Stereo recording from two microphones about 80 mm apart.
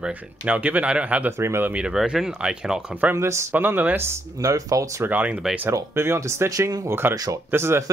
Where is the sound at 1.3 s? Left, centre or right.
Right.